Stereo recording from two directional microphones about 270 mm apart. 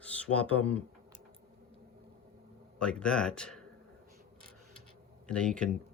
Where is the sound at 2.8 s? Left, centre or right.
Centre.